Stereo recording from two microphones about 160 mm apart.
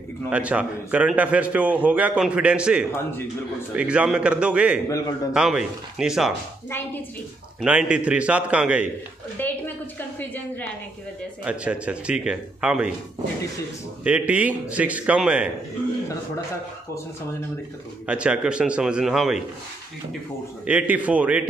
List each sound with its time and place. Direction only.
0.3 s a man's voice: 10° right (ahead or behind)
4.8 s a man's voice: 20° left (ahead or behind)
5.3 s a man's voice: 5° right (ahead or behind)
7.6 s a man's voice: 10° right (ahead or behind)
9.4 s a woman's voice: 10° left (ahead or behind)
11.4 s a man's voice: 5° right (ahead or behind)
14.0 s a man's voice: 10° right (ahead or behind)
18.0 s a man's voice: 5° right (ahead or behind)
20.6 s a man's voice: 10° right (ahead or behind)